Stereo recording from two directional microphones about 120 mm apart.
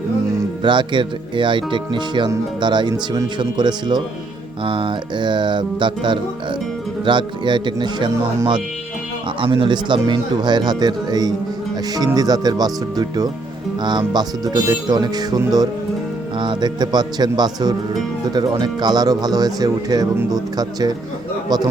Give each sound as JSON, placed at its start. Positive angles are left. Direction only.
{"t": 0.6, "sound": "speech", "side_deg": -40}
{"t": 9.4, "sound": "speech", "side_deg": -40}
{"t": 16.4, "sound": "speech", "side_deg": -40}